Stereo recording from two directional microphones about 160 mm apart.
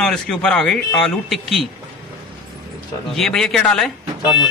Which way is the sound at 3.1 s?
Centre (ahead or behind).